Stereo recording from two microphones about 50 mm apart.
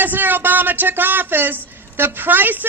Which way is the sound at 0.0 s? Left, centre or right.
Right.